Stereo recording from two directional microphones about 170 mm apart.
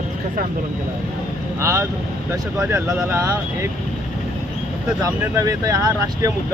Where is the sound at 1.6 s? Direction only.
15° right (ahead or behind).